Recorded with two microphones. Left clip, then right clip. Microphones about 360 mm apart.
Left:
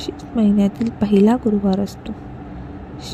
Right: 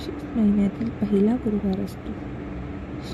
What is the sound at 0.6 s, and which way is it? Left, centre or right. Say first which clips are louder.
Speech: left 6 dB; centre.